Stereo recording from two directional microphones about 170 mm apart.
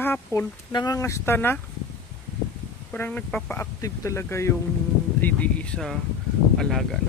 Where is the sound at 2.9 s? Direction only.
10° left (ahead or behind).